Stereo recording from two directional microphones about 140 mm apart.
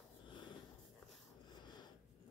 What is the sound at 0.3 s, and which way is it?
Snort, 35° left (ahead or behind).